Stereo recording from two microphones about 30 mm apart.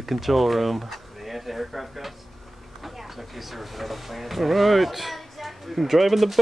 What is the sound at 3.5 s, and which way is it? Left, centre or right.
Speech, centre.